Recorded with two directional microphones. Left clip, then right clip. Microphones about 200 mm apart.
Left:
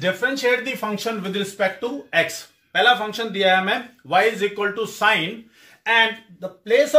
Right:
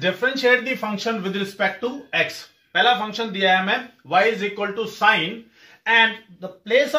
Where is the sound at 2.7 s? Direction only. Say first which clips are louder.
Left 1 dB; 55° left (ahead or behind).